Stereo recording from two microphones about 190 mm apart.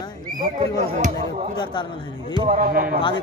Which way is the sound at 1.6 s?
25° left (ahead or behind).